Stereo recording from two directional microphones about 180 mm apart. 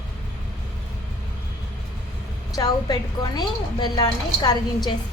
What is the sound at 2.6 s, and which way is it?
A woman's voice, 20° left (ahead or behind).